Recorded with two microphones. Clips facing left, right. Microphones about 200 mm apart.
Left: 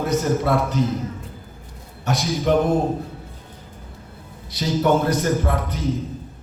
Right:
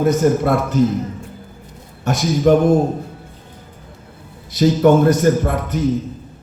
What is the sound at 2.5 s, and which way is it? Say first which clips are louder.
Speech: right 6 dB; 45° right (ahead or behind).